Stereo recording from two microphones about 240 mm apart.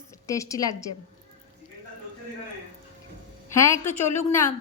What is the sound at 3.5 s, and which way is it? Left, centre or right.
Speech, centre.